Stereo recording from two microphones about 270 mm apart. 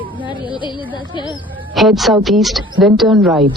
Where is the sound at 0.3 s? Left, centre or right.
Centre.